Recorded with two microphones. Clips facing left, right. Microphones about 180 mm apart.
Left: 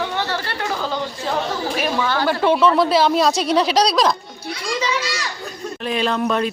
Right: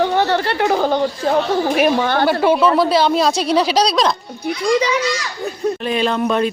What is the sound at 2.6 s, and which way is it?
Speech, centre (ahead or behind).